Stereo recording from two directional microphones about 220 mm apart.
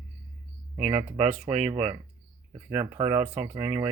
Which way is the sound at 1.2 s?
30° right (ahead or behind).